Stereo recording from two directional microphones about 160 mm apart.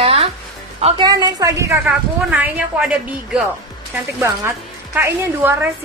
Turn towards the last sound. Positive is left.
turn(degrees=-15)  # may be behind; listen again after turning